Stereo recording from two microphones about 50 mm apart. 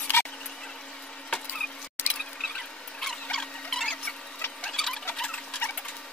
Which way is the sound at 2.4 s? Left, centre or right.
Centre.